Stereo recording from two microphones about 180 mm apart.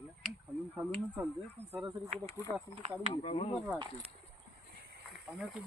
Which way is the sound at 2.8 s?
35° right (ahead or behind).